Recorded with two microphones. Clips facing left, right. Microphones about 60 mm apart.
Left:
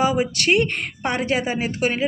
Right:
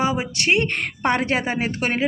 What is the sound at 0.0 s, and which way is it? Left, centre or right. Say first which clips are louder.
Speech: left 2 dB; right.